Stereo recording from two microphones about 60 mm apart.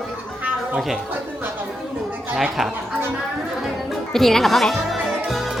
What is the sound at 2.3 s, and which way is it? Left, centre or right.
Speech, centre.